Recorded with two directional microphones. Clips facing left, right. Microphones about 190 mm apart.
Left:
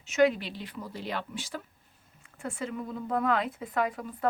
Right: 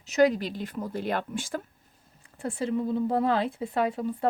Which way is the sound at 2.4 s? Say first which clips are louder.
Right 7 dB; 35° right (ahead or behind).